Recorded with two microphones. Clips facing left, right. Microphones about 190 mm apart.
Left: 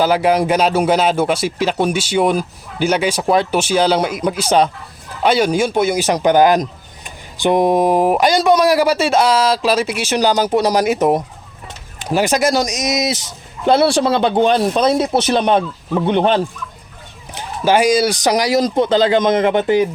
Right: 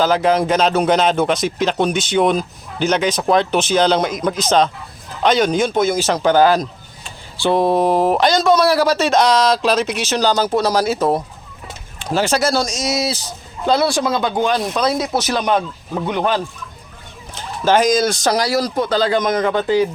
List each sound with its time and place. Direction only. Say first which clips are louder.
0.0 s speech: left 1 dB; 10° left (ahead or behind)
17.3 s speech: left 1 dB; 10° left (ahead or behind)